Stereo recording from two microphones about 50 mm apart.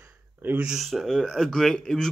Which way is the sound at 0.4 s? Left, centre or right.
Right.